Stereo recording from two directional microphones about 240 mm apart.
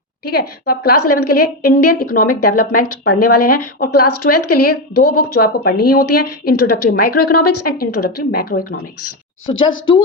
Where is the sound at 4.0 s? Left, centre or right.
Left.